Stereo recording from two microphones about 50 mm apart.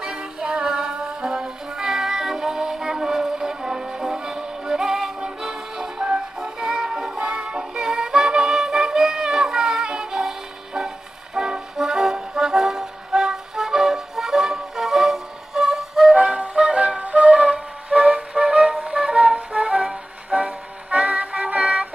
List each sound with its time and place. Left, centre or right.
0.0 s music: centre
11.3 s brass instrument: centre
16.2 s flute: centre